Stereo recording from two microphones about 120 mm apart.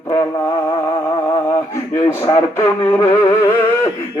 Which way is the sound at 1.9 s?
25° left (ahead or behind).